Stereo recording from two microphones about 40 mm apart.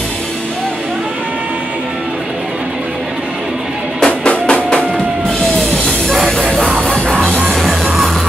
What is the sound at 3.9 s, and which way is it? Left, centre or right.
Music, centre.